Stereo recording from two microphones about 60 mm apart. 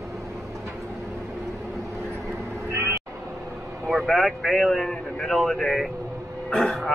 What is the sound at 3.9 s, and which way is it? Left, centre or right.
Speech, centre.